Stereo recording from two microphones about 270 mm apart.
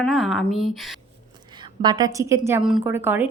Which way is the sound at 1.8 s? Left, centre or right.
Centre.